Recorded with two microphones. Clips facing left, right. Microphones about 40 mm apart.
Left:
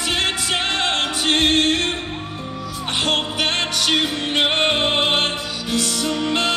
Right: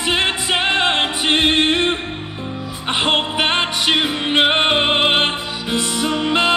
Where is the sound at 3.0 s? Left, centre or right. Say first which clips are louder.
Right 3 dB; right.